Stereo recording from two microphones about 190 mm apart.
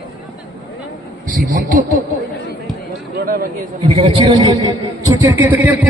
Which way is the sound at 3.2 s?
45° right (ahead or behind).